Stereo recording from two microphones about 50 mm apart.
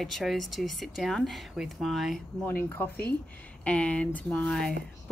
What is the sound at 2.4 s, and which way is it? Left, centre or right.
Speech, left.